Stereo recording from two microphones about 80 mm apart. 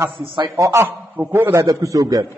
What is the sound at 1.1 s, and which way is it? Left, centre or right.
Speech, right.